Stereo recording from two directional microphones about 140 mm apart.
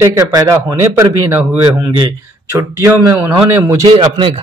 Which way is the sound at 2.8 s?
20° right (ahead or behind).